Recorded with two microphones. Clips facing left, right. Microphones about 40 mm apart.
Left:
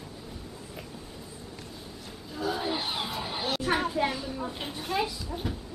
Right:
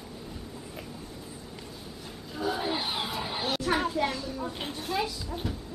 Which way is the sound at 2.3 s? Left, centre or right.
Centre.